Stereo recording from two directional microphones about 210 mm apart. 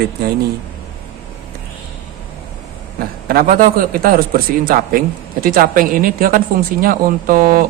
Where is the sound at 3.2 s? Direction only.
45° right (ahead or behind).